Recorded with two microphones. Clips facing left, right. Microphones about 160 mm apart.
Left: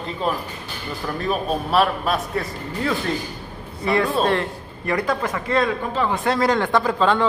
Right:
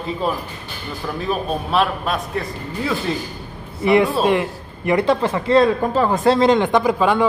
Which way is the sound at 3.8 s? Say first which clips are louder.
Right 4 dB; 20° right (ahead or behind).